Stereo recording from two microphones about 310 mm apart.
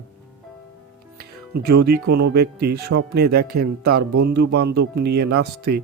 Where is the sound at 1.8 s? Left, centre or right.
Right.